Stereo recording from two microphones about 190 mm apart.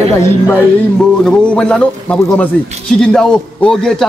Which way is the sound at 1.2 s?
5° left (ahead or behind).